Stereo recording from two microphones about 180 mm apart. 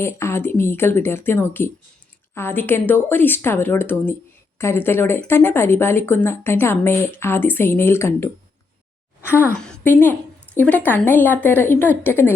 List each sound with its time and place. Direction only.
0.0 s a woman's voice: 15° left (ahead or behind)
9.6 s a woman's voice: 5° left (ahead or behind)